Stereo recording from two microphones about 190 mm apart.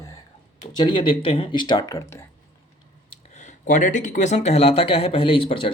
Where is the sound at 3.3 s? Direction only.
40° left (ahead or behind).